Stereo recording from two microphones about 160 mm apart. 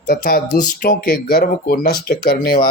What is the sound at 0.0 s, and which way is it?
Speech, 70° left (ahead or behind).